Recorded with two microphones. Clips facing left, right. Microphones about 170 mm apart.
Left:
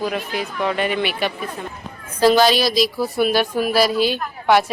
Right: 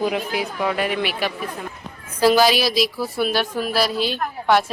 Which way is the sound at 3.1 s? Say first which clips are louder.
Left 4 dB; 10° left (ahead or behind).